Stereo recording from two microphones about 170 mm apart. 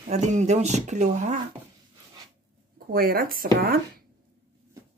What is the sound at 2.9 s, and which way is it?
Speech, 60° right (ahead or behind).